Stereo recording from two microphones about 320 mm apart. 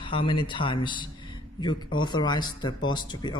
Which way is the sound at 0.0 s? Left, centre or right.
Centre.